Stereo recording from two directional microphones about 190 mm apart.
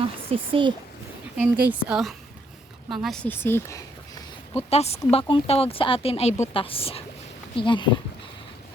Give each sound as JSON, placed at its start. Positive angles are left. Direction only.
{"t": 0.3, "sound": "speech", "side_deg": -25}
{"t": 1.4, "sound": "a woman's voice", "side_deg": -10}
{"t": 4.7, "sound": "speech", "side_deg": 35}